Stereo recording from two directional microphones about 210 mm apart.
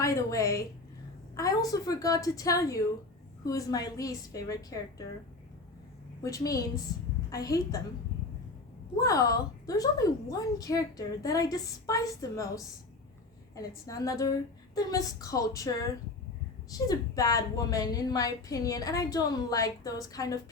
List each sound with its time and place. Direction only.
0.0 s a woman's voice: 15° left (ahead or behind)
6.2 s a woman's voice: 15° left (ahead or behind)
9.0 s a woman's voice: 15° left (ahead or behind)